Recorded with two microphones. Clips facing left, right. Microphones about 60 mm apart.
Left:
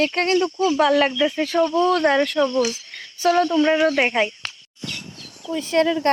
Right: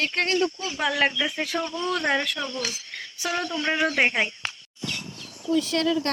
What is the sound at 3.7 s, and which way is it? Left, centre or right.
Speech, right.